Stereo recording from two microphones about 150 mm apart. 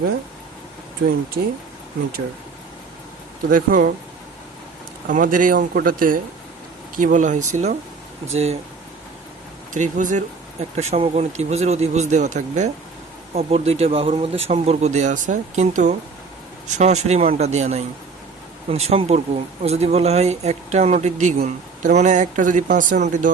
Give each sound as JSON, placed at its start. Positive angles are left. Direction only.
{"t": 3.5, "sound": "speech", "side_deg": -65}
{"t": 5.0, "sound": "speech", "side_deg": -65}
{"t": 9.7, "sound": "speech", "side_deg": -55}
{"t": 10.8, "sound": "speech", "side_deg": -45}
{"t": 13.3, "sound": "speech", "side_deg": -45}